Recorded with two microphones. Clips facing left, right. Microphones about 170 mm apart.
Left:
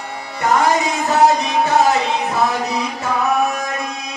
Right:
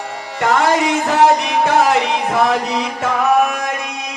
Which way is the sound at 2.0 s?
90° right.